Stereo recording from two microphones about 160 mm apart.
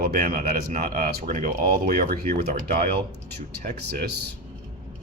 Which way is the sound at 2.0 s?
70° right (ahead or behind).